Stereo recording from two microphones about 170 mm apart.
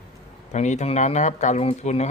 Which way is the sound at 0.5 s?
45° left (ahead or behind).